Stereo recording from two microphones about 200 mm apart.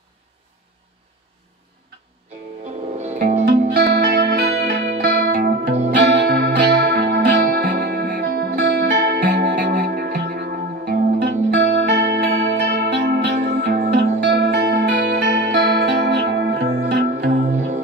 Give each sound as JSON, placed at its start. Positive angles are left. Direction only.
{"t": 3.0, "sound": "music", "side_deg": -35}
{"t": 3.7, "sound": "music", "side_deg": -50}
{"t": 9.6, "sound": "music", "side_deg": -45}